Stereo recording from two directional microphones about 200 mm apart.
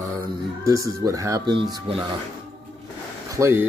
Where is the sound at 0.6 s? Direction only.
15° right (ahead or behind).